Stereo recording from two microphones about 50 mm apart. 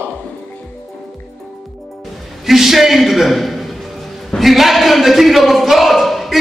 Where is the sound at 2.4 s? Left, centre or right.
Centre.